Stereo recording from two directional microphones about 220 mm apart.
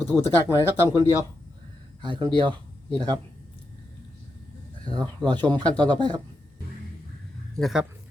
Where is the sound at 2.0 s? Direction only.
20° right (ahead or behind).